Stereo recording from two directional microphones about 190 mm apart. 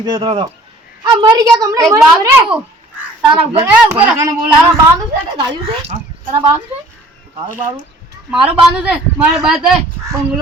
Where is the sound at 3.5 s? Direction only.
20° right (ahead or behind).